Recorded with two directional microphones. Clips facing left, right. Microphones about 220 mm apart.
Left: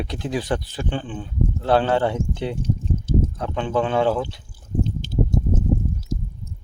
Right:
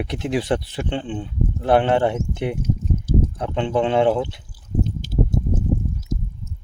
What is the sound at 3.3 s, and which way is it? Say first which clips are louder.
Speech: right 2 dB; 20° right (ahead or behind).